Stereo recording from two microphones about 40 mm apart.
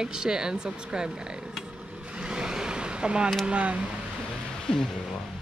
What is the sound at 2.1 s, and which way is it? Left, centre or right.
Vehicle, right.